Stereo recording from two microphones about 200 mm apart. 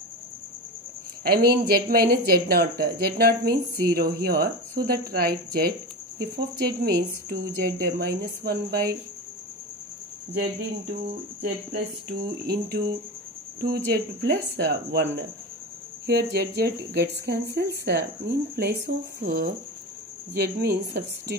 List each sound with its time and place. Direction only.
1.2 s speech: 50° right (ahead or behind)
11.7 s speech: 55° right (ahead or behind)